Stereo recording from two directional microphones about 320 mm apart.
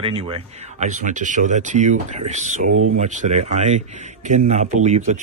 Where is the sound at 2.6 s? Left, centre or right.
Right.